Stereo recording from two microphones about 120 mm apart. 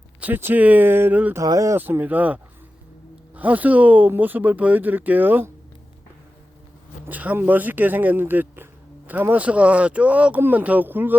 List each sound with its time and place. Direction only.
0.2 s speech: 15° right (ahead or behind)
1.4 s speech: 25° right (ahead or behind)
1.8 s speech: 15° right (ahead or behind)
7.1 s speech: 15° right (ahead or behind)